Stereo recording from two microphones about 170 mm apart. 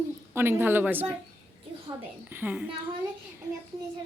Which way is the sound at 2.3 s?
10° right (ahead or behind).